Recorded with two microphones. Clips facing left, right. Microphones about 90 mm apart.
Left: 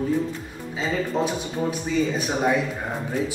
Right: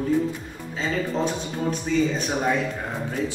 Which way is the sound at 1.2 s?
10° left (ahead or behind).